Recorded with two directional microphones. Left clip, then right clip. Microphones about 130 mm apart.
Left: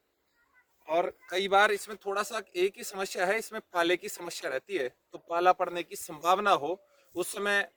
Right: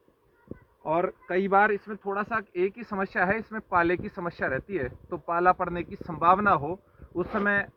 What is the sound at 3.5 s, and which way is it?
A man's voice, 55° left (ahead or behind).